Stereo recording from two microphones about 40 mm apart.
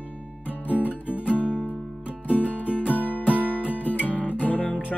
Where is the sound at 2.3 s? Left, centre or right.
Left.